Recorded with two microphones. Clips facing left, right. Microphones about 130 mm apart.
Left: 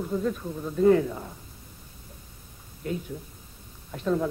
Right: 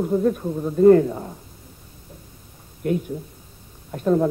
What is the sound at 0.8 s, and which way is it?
Speech, 45° right (ahead or behind).